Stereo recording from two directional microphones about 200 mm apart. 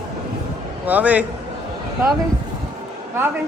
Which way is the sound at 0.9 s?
5° right (ahead or behind).